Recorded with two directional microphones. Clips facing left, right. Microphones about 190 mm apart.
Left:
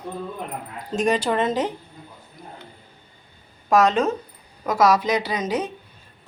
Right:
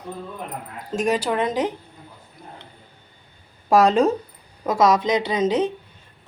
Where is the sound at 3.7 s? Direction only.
30° right (ahead or behind).